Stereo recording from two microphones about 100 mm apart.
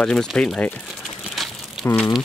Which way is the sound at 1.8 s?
25° left (ahead or behind).